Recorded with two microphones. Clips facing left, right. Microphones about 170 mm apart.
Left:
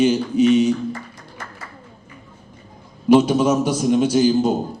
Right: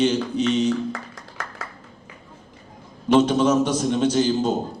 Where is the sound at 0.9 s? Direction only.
90° right.